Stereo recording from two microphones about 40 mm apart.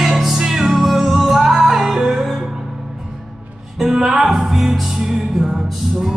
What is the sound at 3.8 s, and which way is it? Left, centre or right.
Music, centre.